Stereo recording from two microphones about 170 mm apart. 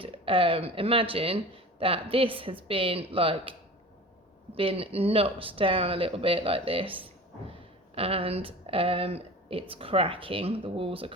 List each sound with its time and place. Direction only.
0.0 s speech: 30° right (ahead or behind)
4.5 s speech: 35° right (ahead or behind)